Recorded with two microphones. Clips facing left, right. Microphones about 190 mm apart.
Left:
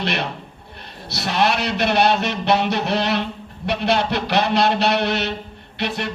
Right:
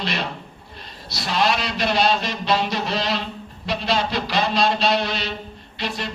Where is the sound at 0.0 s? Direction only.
60° left (ahead or behind).